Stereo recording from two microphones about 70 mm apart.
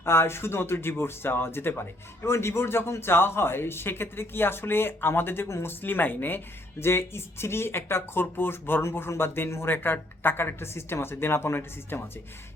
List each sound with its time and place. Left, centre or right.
0.0 s speech: left